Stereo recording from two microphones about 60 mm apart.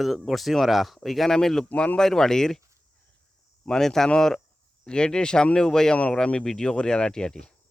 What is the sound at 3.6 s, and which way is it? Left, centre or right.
Speech, centre.